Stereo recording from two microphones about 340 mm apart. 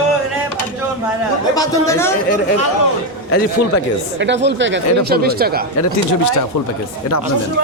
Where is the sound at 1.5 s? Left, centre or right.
Centre.